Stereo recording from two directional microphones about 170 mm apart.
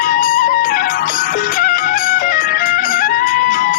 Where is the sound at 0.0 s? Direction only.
55° left (ahead or behind).